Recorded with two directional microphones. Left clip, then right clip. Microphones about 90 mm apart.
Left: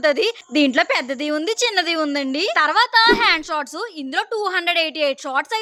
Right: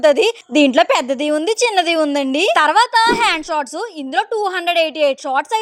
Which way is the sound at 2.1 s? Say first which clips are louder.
Right 5 dB; 55° right (ahead or behind).